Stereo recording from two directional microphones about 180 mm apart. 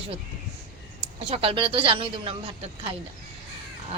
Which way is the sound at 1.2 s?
35° right (ahead or behind).